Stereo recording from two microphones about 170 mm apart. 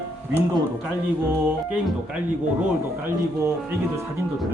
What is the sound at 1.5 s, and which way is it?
Speech, 5° right (ahead or behind).